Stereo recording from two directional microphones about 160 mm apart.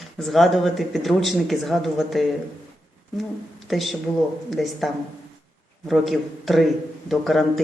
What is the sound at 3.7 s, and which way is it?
Speech, centre (ahead or behind).